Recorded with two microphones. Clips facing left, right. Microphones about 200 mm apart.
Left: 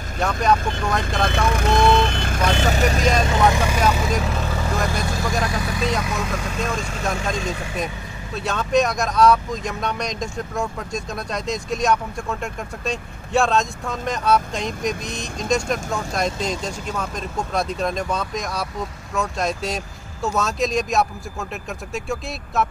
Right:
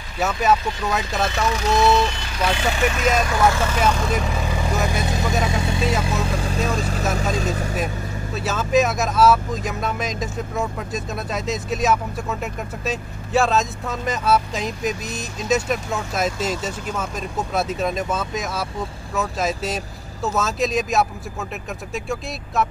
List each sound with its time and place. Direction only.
0.2 s speech: 5° right (ahead or behind)
1.3 s speech: 55° left (ahead or behind); by 3.1 s 40° left (ahead or behind)
3.2 s speech: 25° left (ahead or behind)
4.1 s speech: 5° right (ahead or behind)
5.0 s speech: 20° right (ahead or behind); by 7.7 s 40° right (ahead or behind)
8.4 s speech: 5° right (ahead or behind)